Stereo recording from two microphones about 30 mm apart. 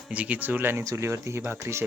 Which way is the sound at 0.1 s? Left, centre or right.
Right.